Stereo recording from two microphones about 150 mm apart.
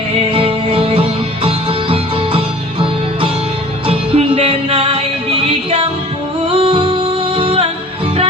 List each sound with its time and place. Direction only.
0.3 s music: 40° right (ahead or behind)
6.5 s music: 35° right (ahead or behind)